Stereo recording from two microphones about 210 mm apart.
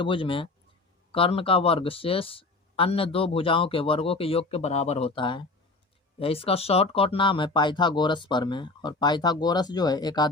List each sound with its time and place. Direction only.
0.0 s speech: 25° left (ahead or behind)